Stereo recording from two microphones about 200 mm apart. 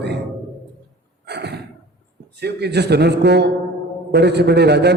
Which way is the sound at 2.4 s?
55° right (ahead or behind).